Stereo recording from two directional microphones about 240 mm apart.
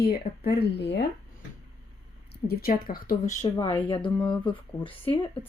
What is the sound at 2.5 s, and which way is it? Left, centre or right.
Speech, left.